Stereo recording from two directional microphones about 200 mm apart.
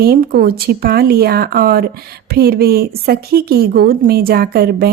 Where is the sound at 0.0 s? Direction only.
50° right (ahead or behind).